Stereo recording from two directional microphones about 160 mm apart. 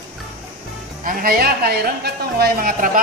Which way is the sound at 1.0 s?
70° right (ahead or behind).